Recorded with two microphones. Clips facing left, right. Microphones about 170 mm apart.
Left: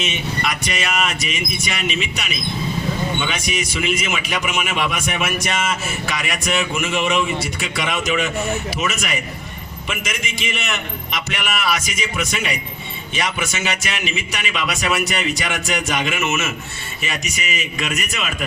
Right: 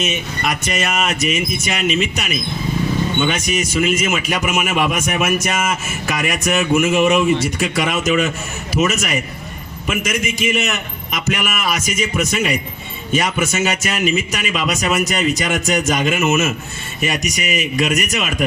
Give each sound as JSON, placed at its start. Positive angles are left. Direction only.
{"t": 0.0, "sound": "a man's voice", "side_deg": -45}